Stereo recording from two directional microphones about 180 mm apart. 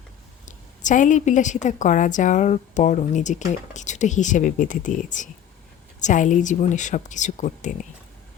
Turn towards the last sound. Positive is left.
turn(degrees=45)  # may be behind; listen again after turning